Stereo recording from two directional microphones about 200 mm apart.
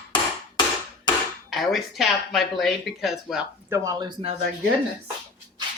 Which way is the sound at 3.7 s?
15° right (ahead or behind).